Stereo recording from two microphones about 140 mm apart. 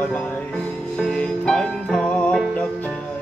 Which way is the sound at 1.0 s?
5° left (ahead or behind).